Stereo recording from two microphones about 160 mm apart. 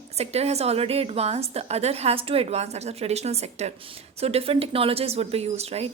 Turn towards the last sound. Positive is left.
turn(degrees=-40)  # may be behind; listen again after turning